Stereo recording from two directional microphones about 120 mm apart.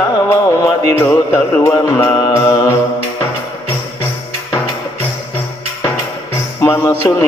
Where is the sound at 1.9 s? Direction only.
20° left (ahead or behind).